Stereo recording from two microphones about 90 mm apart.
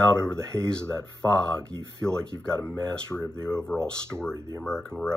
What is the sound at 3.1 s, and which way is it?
Speech, 30° right (ahead or behind).